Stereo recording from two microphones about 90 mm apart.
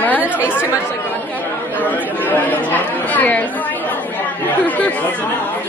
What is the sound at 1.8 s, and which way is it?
Speech, 20° left (ahead or behind).